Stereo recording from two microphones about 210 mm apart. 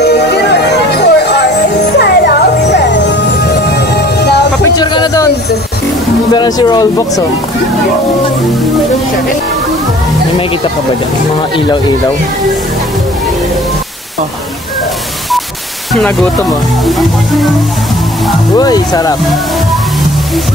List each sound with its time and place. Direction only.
0.0 s music: 50° left (ahead or behind)
4.7 s a sound: 20° left (ahead or behind)
6.3 s speech: 20° left (ahead or behind)
15.9 s speech: 5° left (ahead or behind)
18.6 s speech: 20° left (ahead or behind)